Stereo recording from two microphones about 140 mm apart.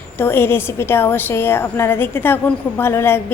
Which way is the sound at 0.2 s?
15° left (ahead or behind).